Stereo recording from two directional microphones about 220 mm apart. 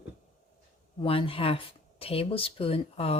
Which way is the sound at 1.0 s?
25° left (ahead or behind).